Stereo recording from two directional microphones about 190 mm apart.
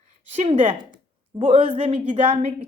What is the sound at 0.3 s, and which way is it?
A woman's voice, 35° right (ahead or behind).